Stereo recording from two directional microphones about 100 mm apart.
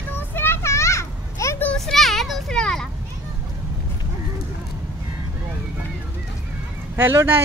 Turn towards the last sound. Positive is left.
turn(degrees=-20)  # may be behind; listen again after turning